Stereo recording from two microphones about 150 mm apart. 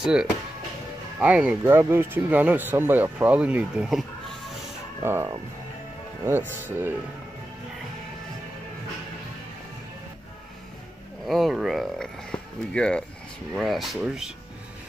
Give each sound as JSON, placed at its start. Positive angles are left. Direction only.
{"t": 0.0, "sound": "speech", "side_deg": -5}
{"t": 5.0, "sound": "speech", "side_deg": -15}
{"t": 11.2, "sound": "a sound", "side_deg": 0}
{"t": 13.6, "sound": "speech", "side_deg": 0}